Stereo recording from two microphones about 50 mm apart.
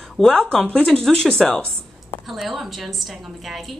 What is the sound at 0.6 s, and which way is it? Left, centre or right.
Speech, left.